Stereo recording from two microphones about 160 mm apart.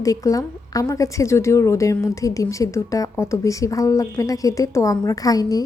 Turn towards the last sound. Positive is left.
turn(degrees=25)  # may be behind; listen again after turning